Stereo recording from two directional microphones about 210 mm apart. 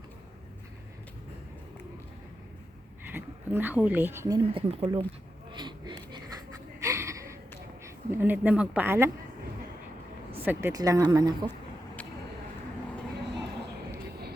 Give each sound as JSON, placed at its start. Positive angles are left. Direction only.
{"t": 3.0, "sound": "speech", "side_deg": -10}
{"t": 5.5, "sound": "a sound", "side_deg": -20}
{"t": 8.1, "sound": "speech", "side_deg": -10}
{"t": 10.4, "sound": "speech", "side_deg": -10}